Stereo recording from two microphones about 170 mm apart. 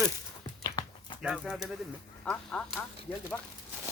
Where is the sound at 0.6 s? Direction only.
25° left (ahead or behind).